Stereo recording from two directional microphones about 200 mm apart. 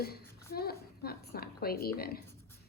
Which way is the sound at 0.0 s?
50° left (ahead or behind).